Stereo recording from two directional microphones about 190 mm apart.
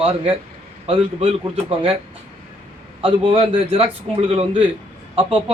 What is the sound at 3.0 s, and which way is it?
A man's voice, 30° right (ahead or behind).